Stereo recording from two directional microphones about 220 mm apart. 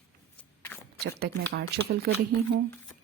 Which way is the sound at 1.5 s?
45° right (ahead or behind).